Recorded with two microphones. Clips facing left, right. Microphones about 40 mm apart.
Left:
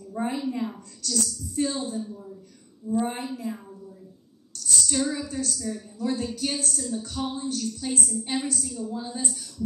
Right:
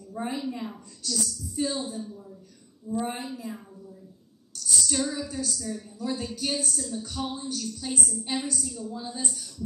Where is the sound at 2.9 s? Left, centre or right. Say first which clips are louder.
Left 4 dB; centre.